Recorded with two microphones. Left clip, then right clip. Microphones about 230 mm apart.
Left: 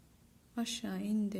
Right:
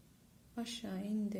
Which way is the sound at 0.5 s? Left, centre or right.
Left.